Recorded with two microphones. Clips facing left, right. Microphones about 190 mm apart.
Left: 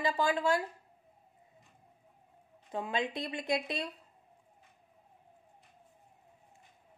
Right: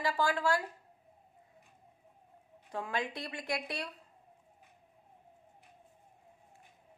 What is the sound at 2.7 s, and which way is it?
A woman's voice, 20° left (ahead or behind).